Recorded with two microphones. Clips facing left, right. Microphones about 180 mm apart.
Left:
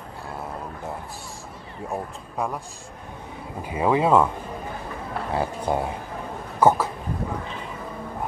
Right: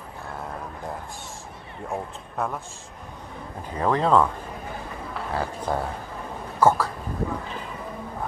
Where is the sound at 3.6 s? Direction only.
10° left (ahead or behind).